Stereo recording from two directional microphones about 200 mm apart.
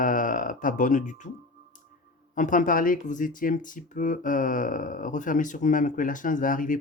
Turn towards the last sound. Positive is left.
turn(degrees=45)  # may be behind; listen again after turning